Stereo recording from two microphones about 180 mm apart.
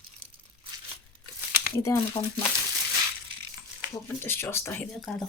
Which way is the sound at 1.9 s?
15° left (ahead or behind).